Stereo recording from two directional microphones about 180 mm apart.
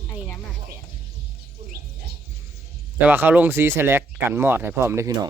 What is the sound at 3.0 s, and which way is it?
Speech, 10° right (ahead or behind).